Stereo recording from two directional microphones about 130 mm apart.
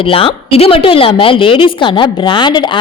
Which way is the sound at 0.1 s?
45° left (ahead or behind).